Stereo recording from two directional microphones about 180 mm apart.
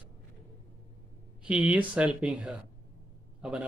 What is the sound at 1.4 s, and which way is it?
Speech, 5° right (ahead or behind).